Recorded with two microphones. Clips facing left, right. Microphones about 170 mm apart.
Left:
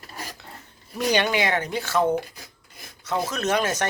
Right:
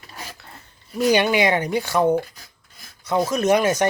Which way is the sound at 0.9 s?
10° right (ahead or behind).